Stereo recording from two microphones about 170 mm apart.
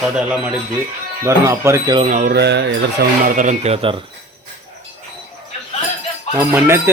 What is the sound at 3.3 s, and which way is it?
Speech, 45° right (ahead or behind).